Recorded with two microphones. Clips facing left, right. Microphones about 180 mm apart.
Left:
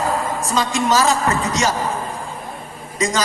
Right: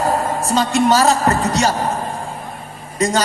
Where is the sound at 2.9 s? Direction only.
65° right (ahead or behind).